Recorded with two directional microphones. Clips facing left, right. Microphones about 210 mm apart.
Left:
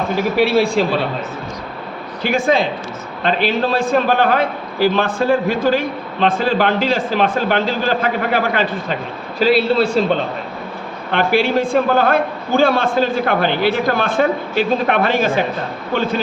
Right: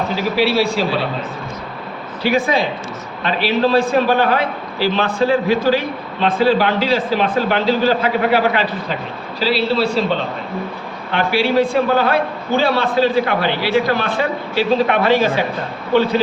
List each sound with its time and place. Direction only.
0.2 s a man's voice: 50° left (ahead or behind)
2.2 s a man's voice: 50° left (ahead or behind)
11.1 s a man's voice: 50° left (ahead or behind)